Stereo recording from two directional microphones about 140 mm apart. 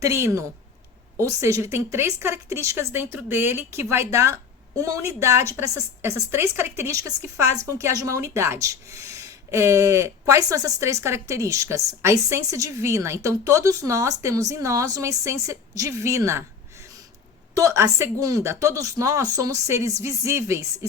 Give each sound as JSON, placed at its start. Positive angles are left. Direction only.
{"t": 0.0, "sound": "a woman's voice", "side_deg": -20}
{"t": 17.5, "sound": "a woman's voice", "side_deg": -20}